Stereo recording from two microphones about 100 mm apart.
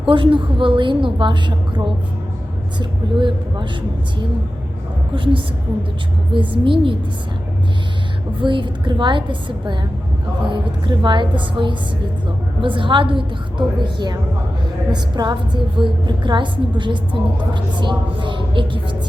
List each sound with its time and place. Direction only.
0.1 s a woman's voice: 60° right (ahead or behind)
5.1 s a woman's voice: 60° right (ahead or behind)
8.4 s a woman's voice: 55° right (ahead or behind)